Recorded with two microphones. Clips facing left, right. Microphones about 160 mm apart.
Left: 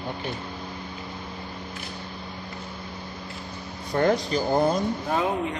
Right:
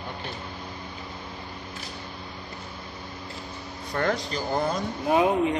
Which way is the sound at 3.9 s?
20° left (ahead or behind).